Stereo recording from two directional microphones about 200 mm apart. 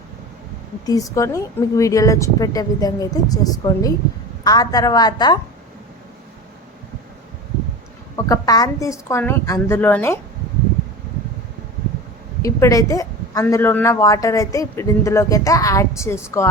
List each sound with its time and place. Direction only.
0.9 s a woman's voice: 15° left (ahead or behind)
8.1 s a woman's voice: 20° left (ahead or behind)
12.4 s a woman's voice: 15° left (ahead or behind)